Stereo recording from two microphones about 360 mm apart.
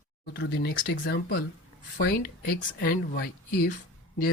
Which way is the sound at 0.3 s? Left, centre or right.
Left.